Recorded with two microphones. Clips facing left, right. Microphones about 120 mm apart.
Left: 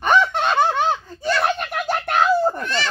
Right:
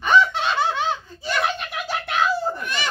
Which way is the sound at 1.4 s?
50° left (ahead or behind).